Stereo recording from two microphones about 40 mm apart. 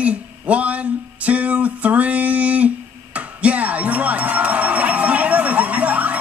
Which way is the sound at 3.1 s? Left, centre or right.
Right.